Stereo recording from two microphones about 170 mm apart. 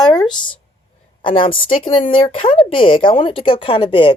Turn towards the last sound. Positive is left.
turn(degrees=30)  # may be behind; listen again after turning